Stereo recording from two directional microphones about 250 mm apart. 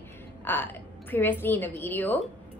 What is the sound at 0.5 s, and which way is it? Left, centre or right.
A woman's voice, centre.